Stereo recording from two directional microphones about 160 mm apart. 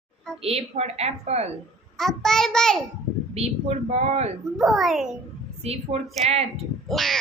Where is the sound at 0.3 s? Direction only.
40° right (ahead or behind).